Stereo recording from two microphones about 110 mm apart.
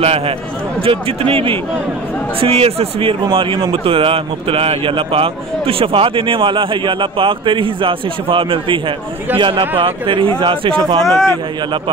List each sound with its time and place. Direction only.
0.8 s speech: 60° right (ahead or behind)
11.1 s a man's voice: 25° left (ahead or behind)